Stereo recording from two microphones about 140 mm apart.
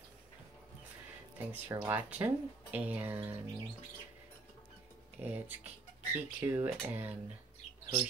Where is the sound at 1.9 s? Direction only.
15° right (ahead or behind).